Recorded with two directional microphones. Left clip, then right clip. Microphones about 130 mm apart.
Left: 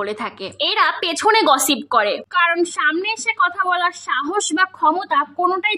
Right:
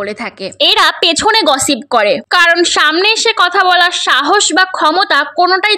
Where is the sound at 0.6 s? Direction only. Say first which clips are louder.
Right 8 dB; 40° right (ahead or behind).